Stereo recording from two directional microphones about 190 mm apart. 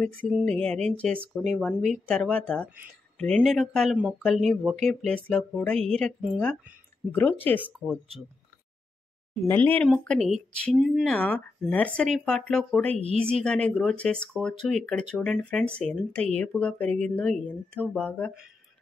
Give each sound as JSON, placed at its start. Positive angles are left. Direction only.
{"t": 0.3, "sound": "speech", "side_deg": -5}
{"t": 0.6, "sound": "speech", "side_deg": 5}
{"t": 9.5, "sound": "speech", "side_deg": 10}
{"t": 11.1, "sound": "speech", "side_deg": 10}
{"t": 12.9, "sound": "speech", "side_deg": -35}
{"t": 13.3, "sound": "speech", "side_deg": 5}